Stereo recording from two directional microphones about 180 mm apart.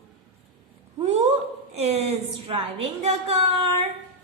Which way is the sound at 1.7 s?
35° right (ahead or behind).